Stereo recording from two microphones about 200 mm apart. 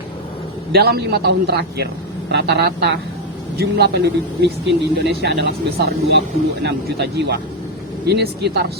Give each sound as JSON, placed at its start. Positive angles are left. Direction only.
{"t": 0.7, "sound": "a man's voice", "side_deg": -50}